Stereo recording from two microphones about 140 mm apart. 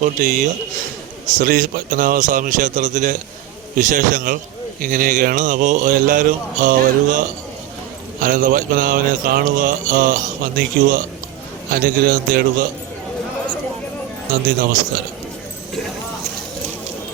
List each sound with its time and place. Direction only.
0.0 s speech: 65° right (ahead or behind)
1.4 s a man's voice: 90° right
4.8 s mantra: 90° right
11.7 s a man's voice: 90° right